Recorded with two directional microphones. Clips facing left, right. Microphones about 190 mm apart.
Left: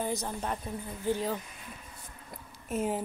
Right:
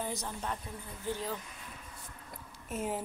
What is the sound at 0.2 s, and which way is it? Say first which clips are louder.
Speech: left 4 dB; 40° left (ahead or behind).